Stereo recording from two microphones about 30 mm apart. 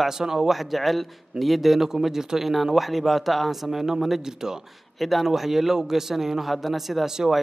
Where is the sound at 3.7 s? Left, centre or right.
Centre.